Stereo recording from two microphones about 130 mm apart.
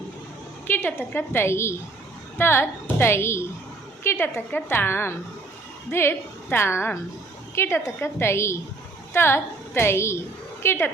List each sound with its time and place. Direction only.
0.7 s a woman's voice: 15° left (ahead or behind)